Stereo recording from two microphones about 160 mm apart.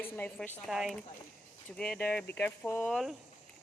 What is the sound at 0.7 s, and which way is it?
Speech, centre (ahead or behind).